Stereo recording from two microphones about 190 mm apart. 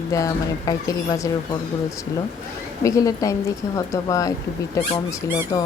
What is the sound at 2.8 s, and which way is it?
Speech, 15° left (ahead or behind).